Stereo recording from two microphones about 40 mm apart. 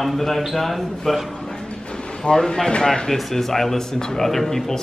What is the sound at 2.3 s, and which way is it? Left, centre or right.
Speech, centre.